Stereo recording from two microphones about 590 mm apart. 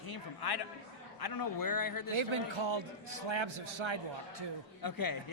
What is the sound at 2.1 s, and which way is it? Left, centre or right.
A man's voice, right.